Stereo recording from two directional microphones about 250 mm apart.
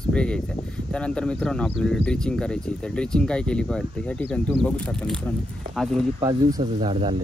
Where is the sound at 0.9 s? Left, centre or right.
Centre.